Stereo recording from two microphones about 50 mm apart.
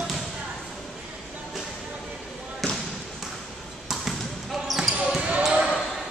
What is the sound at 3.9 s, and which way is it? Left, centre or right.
Basketball bounce, centre.